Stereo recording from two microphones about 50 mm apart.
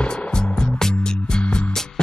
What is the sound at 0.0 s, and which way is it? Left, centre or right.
Music, centre.